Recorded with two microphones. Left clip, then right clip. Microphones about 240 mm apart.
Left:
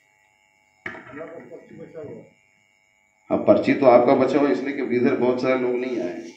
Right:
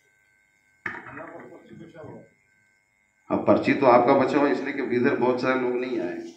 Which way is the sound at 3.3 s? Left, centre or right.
Centre.